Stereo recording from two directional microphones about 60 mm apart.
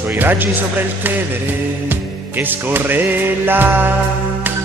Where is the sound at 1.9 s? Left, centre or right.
Right.